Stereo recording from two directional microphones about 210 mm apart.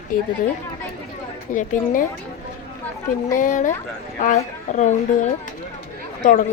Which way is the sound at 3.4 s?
40° left (ahead or behind).